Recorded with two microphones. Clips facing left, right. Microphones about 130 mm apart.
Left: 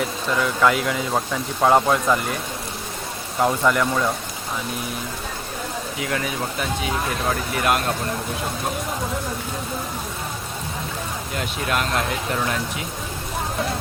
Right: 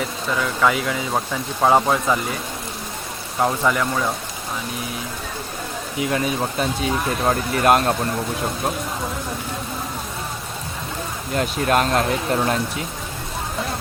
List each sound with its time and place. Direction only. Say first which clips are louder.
0.0 s speech: left 1 dB; centre (ahead or behind)
3.4 s speech: left 1 dB; centre (ahead or behind)
6.0 s speech: right 5 dB; 25° right (ahead or behind)
7.3 s speech: right 6 dB; 40° right (ahead or behind)
11.3 s speech: right 6 dB; 40° right (ahead or behind)